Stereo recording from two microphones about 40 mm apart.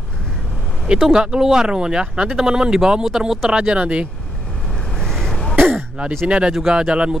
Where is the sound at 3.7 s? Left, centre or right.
Right.